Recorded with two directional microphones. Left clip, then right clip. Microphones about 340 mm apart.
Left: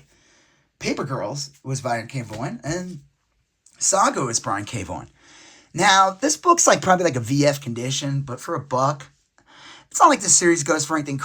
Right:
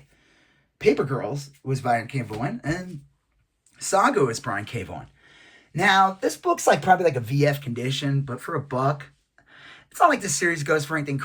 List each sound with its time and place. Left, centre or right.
0.8 s speech: centre